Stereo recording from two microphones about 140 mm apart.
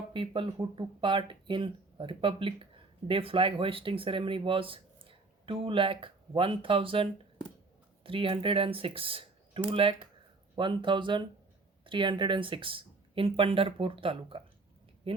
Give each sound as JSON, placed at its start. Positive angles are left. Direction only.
{"t": 0.1, "sound": "speech", "side_deg": -40}